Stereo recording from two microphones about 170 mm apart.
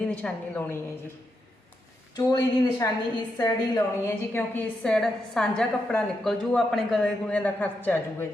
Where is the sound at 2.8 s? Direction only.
20° left (ahead or behind).